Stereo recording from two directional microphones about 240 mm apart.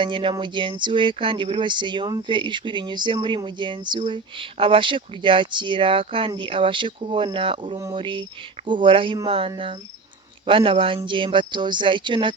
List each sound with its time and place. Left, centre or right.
0.0 s speech: right